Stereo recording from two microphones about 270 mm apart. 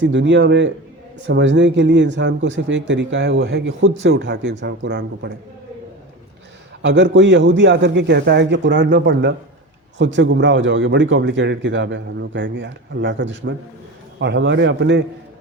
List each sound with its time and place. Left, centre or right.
0.0 s a man's voice: right
6.8 s a man's voice: right